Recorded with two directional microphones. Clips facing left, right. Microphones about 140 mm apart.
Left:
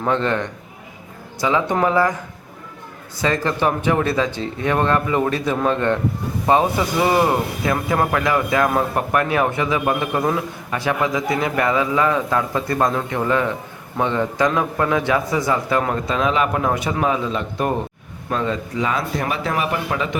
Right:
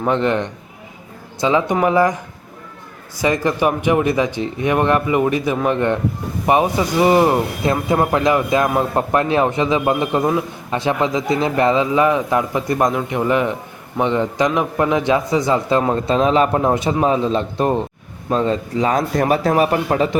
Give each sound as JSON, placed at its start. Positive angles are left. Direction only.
{"t": 0.0, "sound": "speech", "side_deg": -15}
{"t": 3.2, "sound": "speech", "side_deg": -15}